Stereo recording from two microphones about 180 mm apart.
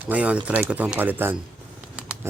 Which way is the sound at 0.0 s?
10° right (ahead or behind).